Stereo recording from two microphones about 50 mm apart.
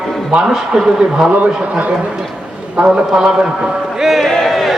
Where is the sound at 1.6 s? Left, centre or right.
Right; by 4.3 s centre.